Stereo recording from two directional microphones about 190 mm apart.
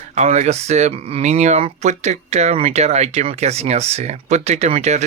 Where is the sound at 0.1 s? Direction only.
40° right (ahead or behind).